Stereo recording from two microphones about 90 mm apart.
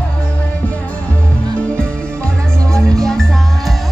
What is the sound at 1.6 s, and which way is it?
Music, 10° left (ahead or behind).